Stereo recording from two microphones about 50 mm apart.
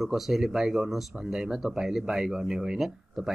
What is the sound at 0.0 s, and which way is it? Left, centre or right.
Speech, centre.